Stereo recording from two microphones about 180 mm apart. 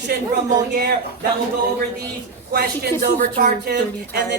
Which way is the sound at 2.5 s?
60° right (ahead or behind).